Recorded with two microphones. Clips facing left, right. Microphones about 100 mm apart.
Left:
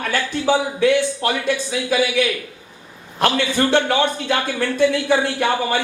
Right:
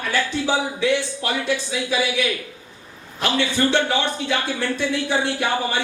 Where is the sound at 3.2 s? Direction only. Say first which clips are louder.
Left 3 dB; 50° left (ahead or behind).